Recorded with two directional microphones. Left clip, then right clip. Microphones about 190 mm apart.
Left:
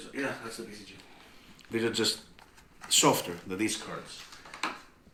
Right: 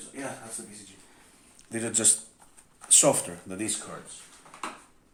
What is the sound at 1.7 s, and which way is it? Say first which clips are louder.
Speech: left 1 dB; 45° right (ahead or behind).